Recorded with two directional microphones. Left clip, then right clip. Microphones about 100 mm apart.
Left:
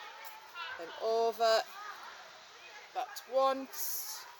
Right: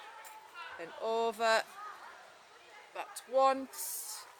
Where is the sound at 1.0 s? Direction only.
30° right (ahead or behind).